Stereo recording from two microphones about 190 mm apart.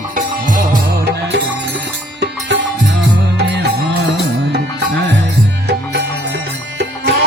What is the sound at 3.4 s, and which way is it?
Music, 65° right (ahead or behind).